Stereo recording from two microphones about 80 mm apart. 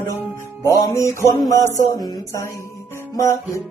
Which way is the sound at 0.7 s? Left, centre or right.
Left.